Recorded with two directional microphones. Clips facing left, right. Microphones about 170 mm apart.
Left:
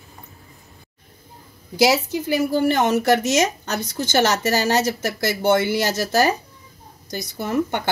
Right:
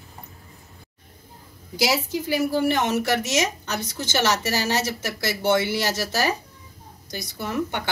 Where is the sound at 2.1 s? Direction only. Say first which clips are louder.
Left 2 dB; 50° left (ahead or behind).